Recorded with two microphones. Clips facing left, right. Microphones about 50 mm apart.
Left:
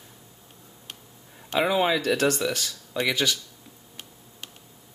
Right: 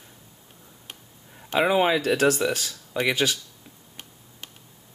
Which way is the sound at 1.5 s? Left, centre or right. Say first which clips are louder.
Right 2 dB; centre.